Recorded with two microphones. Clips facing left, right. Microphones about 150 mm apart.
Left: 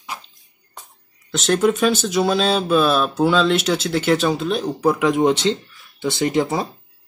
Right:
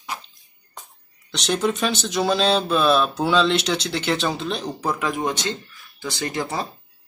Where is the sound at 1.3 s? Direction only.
Centre (ahead or behind).